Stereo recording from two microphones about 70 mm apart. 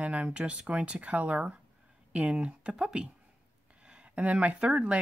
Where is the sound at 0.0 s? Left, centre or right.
Centre.